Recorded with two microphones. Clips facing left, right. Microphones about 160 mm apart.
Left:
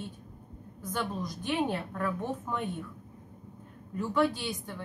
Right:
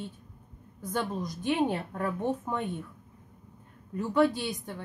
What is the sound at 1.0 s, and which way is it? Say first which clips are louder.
A woman's voice: right 2 dB; 20° right (ahead or behind).